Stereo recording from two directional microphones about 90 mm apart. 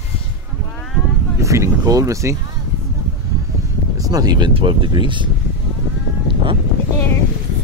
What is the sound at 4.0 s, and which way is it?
Speech, 45° right (ahead or behind).